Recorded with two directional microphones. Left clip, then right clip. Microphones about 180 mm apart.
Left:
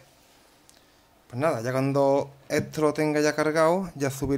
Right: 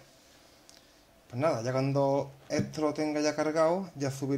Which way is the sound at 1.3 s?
20° left (ahead or behind).